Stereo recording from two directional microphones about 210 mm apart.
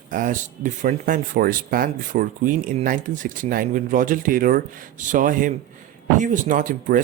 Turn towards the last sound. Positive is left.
turn(degrees=-40)  # may be behind; listen again after turning